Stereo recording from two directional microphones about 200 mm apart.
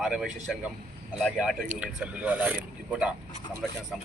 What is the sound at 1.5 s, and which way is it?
Speech, 35° right (ahead or behind).